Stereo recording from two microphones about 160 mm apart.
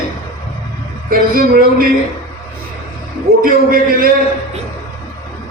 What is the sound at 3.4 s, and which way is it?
Speech, 65° right (ahead or behind).